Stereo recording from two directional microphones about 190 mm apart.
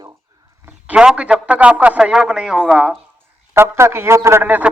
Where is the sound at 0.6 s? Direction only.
5° right (ahead or behind).